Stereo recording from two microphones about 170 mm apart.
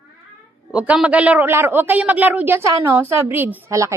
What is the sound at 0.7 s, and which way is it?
A man's voice, 5° right (ahead or behind).